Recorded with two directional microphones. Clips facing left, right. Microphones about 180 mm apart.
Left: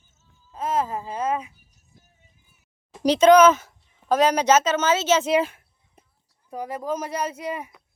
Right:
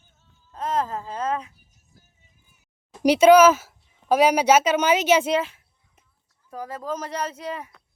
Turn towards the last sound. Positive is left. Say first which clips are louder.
# left 2 dB
turn(degrees=10)  # may be behind; listen again after turning